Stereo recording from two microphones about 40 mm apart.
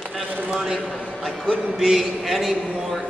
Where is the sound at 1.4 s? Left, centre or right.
Right.